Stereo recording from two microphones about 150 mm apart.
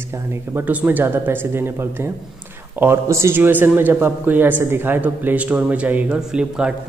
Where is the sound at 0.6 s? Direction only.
10° right (ahead or behind).